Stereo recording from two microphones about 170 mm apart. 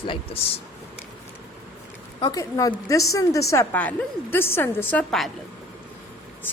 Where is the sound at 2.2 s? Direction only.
25° left (ahead or behind); by 5.3 s centre (ahead or behind).